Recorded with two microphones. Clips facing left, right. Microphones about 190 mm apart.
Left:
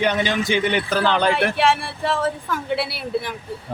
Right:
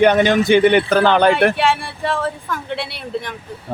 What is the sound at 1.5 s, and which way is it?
Speech, centre (ahead or behind).